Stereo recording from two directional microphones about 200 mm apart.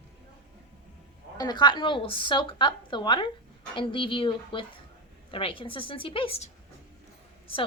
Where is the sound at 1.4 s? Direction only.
20° left (ahead or behind).